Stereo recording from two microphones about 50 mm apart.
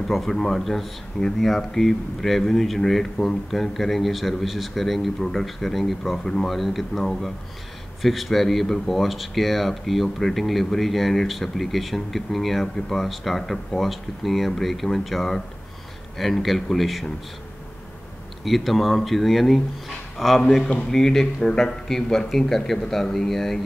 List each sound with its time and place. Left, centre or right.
0.1 s speech: centre
18.4 s a man's voice: centre
20.4 s speech: centre